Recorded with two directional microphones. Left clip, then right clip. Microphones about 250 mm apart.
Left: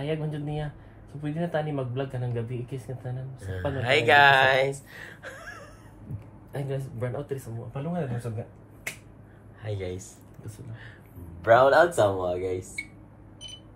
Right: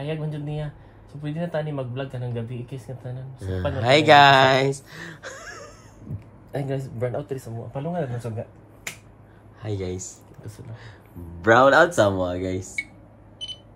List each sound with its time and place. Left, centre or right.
0.0 s speech: centre
3.7 s speech: right
6.5 s speech: right
9.6 s speech: right
11.4 s speech: right